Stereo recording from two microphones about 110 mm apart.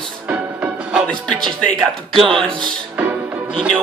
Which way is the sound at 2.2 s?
55° right (ahead or behind).